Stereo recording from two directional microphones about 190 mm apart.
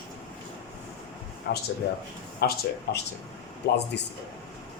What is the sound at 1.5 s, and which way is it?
A man's voice, 55° left (ahead or behind).